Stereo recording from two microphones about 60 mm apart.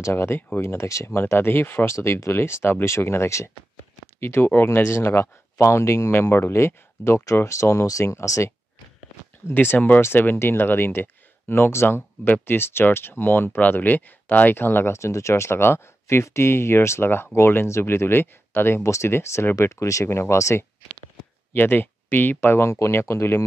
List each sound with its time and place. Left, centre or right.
0.0 s speech: left
1.0 s speech: left
2.0 s speech: left
6.1 s speech: left
9.5 s speech: left
14.9 s speech: left
18.8 s speech: left
21.5 s speech: left
22.7 s speech: left